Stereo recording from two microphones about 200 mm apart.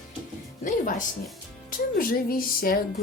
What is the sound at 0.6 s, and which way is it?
A woman's voice, 40° left (ahead or behind).